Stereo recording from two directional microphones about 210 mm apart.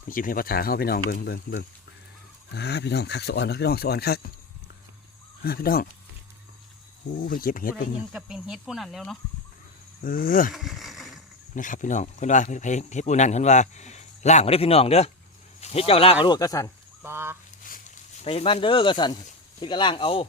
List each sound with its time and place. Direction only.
0.1 s speech: 40° left (ahead or behind)
5.4 s speech: 45° left (ahead or behind)
7.3 s speech: 40° left (ahead or behind)
8.1 s speech: centre (ahead or behind)
10.0 s speech: 40° left (ahead or behind)
10.5 s a sound: centre (ahead or behind)
11.5 s speech: 40° left (ahead or behind); by 16.7 s 15° left (ahead or behind)
17.0 s fowl: 10° right (ahead or behind)
17.6 s a sound: 40° left (ahead or behind); by 19.2 s 20° left (ahead or behind)
19.6 s speech: 20° left (ahead or behind)